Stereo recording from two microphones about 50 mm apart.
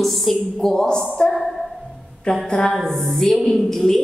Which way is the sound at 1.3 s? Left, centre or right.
Centre.